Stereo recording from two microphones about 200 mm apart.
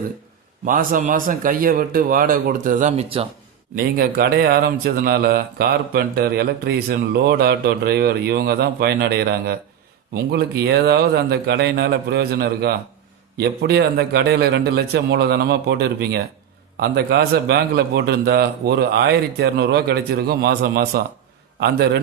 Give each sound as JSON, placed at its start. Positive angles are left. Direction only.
{"t": 0.6, "sound": "speech", "side_deg": -45}
{"t": 3.8, "sound": "speech", "side_deg": -45}